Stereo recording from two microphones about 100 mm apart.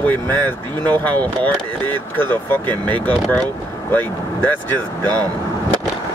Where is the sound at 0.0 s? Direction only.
20° left (ahead or behind).